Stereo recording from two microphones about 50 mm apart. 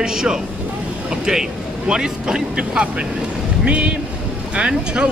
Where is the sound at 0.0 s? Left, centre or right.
Centre.